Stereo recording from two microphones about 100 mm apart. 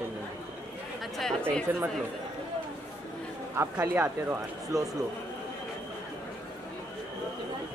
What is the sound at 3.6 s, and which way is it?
Speech, 25° right (ahead or behind).